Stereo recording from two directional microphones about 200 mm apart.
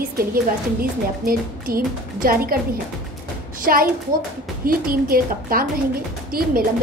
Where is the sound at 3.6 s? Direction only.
45° right (ahead or behind).